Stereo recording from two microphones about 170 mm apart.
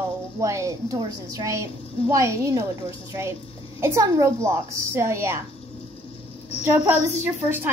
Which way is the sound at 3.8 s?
15° right (ahead or behind).